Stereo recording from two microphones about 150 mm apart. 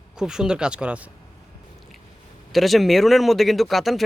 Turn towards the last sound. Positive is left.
turn(degrees=0)  # may be behind; listen again after turning